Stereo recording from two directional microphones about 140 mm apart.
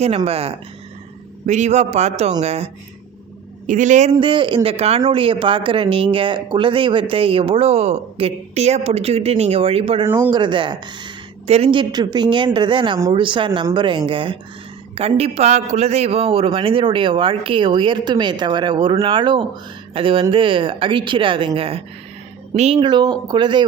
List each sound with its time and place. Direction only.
0.3 s speech: 45° right (ahead or behind)
1.5 s a man's voice: 60° right (ahead or behind)
3.7 s a man's voice: 60° right (ahead or behind)
4.2 s speech: 35° right (ahead or behind)
5.0 s speech: 40° right (ahead or behind)
22.8 s speech: 30° right (ahead or behind)